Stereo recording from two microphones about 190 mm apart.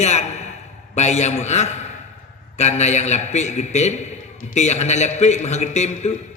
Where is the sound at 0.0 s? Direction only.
35° left (ahead or behind).